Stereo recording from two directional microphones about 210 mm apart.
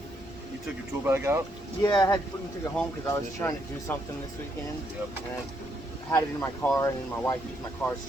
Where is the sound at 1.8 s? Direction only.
20° left (ahead or behind).